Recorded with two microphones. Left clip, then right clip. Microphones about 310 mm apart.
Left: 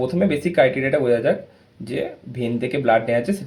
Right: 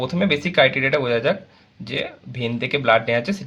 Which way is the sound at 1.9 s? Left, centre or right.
Right.